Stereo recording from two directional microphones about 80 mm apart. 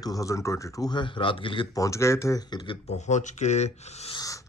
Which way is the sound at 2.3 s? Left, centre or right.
Left.